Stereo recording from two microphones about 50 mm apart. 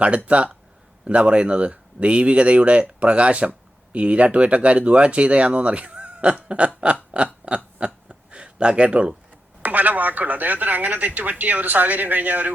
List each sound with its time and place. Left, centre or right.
0.3 s speech: right
7.4 s a sound: right
9.6 s speech: right